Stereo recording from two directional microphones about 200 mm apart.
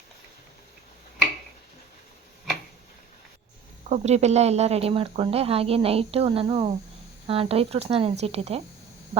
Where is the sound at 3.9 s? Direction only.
35° right (ahead or behind).